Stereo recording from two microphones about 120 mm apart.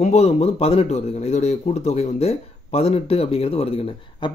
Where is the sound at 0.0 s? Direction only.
65° left (ahead or behind).